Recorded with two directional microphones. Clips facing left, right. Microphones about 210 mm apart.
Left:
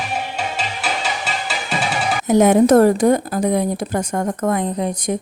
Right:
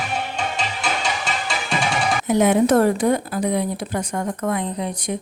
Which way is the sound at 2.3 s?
45° left (ahead or behind).